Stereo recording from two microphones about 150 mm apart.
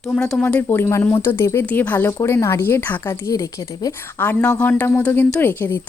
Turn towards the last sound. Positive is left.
turn(degrees=15)  # may be behind; listen again after turning